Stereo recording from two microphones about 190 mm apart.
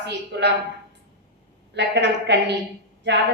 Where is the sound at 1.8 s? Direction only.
65° right (ahead or behind).